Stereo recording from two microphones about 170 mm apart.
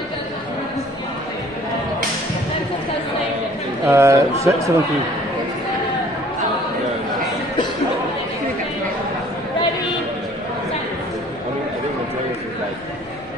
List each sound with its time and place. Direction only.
3.8 s speech: 15° right (ahead or behind)